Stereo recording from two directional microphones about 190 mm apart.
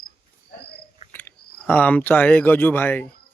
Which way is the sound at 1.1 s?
10° left (ahead or behind).